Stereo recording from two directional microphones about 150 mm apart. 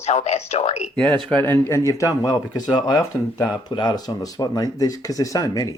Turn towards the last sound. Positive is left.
turn(degrees=25)  # may be behind; listen again after turning